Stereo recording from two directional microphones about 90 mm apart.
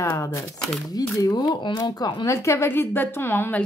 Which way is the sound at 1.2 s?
50° left (ahead or behind).